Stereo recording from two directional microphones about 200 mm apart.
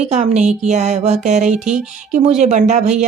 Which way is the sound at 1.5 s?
5° right (ahead or behind).